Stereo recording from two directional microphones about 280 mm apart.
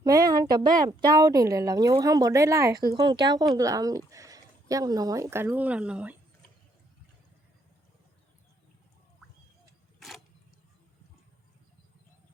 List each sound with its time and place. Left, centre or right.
0.0 s speech: centre